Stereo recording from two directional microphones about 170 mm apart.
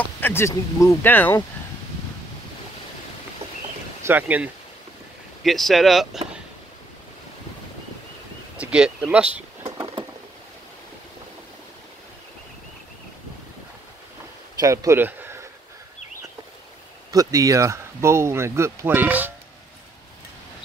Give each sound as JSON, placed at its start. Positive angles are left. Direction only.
{"t": 0.2, "sound": "speech", "side_deg": 15}
{"t": 4.0, "sound": "speech", "side_deg": -10}
{"t": 5.4, "sound": "speech", "side_deg": 0}
{"t": 8.5, "sound": "speech", "side_deg": -5}
{"t": 14.6, "sound": "speech", "side_deg": -20}
{"t": 17.1, "sound": "speech", "side_deg": -20}